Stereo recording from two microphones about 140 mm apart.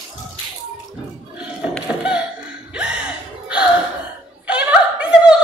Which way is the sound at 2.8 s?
10° right (ahead or behind).